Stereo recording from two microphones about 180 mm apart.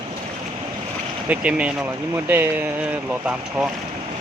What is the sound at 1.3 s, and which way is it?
Speech, 5° right (ahead or behind).